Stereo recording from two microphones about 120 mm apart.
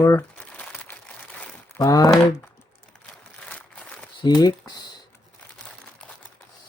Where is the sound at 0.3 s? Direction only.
10° left (ahead or behind).